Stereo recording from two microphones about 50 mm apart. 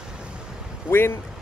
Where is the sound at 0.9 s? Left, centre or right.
Left.